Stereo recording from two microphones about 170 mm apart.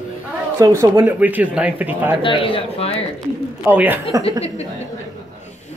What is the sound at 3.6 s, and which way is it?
Speech, 10° right (ahead or behind).